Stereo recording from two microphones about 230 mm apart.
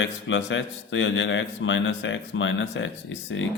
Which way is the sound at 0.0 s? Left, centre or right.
Left.